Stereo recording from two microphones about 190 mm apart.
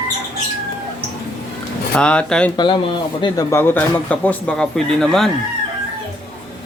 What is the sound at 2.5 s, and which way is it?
Speech, 25° left (ahead or behind).